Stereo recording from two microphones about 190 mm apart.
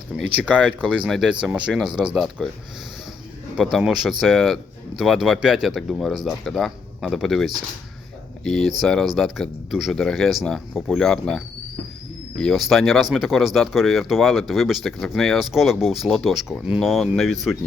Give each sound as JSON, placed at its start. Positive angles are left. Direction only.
{"t": 0.2, "sound": "speech", "side_deg": -5}
{"t": 3.6, "sound": "speech", "side_deg": 0}